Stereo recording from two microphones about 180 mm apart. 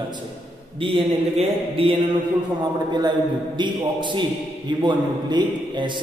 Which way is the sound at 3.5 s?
25° right (ahead or behind).